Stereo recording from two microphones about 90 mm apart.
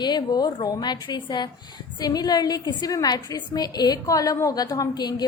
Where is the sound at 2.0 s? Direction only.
45° left (ahead or behind).